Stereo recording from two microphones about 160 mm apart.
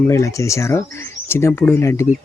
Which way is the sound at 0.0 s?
20° left (ahead or behind).